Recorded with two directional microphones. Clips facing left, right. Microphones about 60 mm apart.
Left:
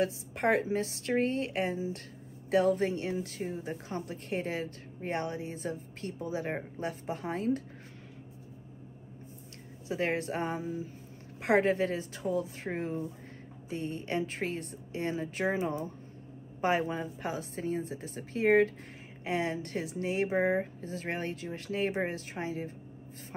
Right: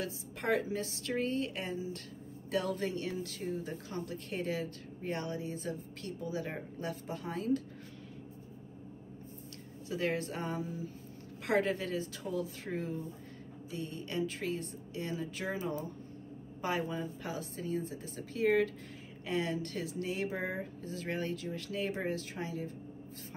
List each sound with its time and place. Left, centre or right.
0.0 s a woman's voice: left
9.8 s a woman's voice: left